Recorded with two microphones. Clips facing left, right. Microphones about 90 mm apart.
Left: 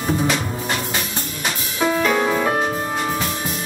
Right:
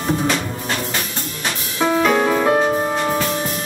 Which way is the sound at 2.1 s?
5° right (ahead or behind).